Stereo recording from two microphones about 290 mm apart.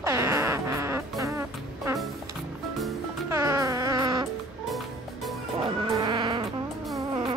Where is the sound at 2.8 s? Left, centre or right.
Centre.